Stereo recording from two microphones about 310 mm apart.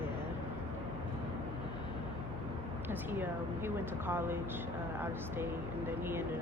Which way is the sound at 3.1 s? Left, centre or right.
Centre.